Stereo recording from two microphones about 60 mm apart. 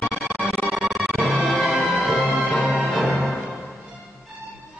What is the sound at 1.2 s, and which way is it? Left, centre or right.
Music, left.